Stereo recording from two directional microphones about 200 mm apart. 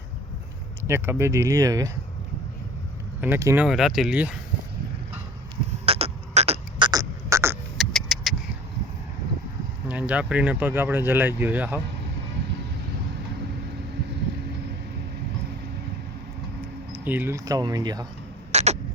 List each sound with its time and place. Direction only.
0.9 s speech: 10° right (ahead or behind)
3.2 s speech: 10° right (ahead or behind)
5.8 s a sound: 30° right (ahead or behind); by 7.6 s 15° right (ahead or behind)
7.8 s vehicle: centre (ahead or behind)
9.9 s speech: 5° right (ahead or behind)
16.9 s speech: 10° right (ahead or behind)
18.5 s a sound: 35° right (ahead or behind)